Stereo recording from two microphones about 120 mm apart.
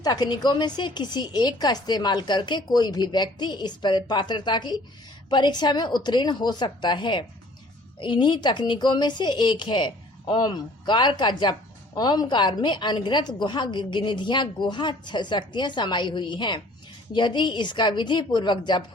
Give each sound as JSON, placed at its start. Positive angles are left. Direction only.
{"t": 0.0, "sound": "a woman's voice", "side_deg": 35}